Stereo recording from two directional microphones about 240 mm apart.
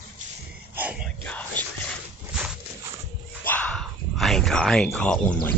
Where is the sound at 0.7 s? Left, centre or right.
Centre.